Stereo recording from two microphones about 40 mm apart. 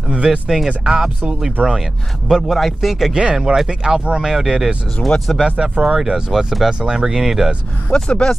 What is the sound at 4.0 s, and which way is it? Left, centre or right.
Speech, right.